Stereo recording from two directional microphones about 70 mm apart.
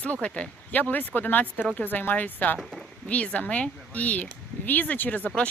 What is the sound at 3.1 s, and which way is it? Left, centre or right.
Speech, centre.